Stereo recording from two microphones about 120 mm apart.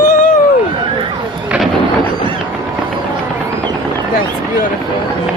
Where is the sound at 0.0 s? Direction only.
90° left.